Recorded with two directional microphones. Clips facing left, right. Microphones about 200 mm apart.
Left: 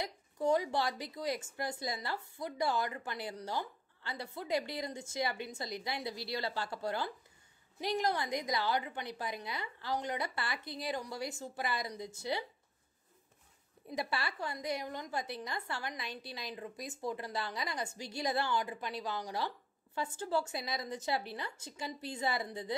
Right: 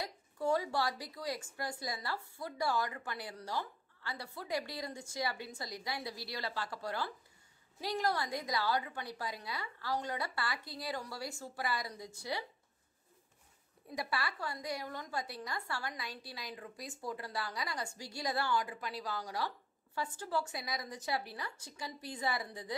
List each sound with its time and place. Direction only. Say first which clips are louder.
0.0 s a woman's voice: left 2 dB; 20° left (ahead or behind)
13.8 s a woman's voice: left 1 dB; 25° left (ahead or behind)